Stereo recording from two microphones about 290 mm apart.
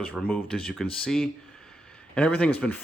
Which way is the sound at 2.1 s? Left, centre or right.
Centre.